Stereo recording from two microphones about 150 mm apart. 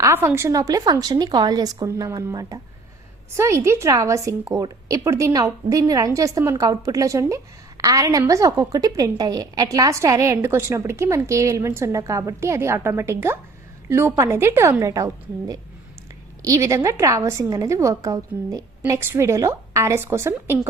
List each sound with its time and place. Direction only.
0.0 s a woman's voice: 15° right (ahead or behind)